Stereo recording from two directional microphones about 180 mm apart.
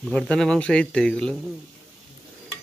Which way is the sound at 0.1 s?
5° left (ahead or behind).